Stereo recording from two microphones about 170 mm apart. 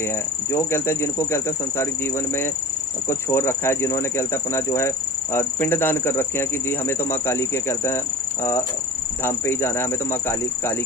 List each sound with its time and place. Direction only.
0.5 s speech: 15° left (ahead or behind)
3.1 s speech: 15° left (ahead or behind)
9.2 s speech: 15° left (ahead or behind)